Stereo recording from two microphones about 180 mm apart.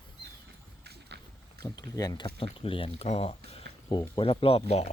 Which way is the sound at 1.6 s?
20° left (ahead or behind).